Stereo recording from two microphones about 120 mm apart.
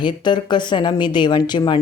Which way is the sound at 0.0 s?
40° left (ahead or behind).